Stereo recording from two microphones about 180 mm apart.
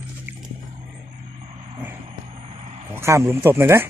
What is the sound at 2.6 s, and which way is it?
Vehicle, 35° right (ahead or behind).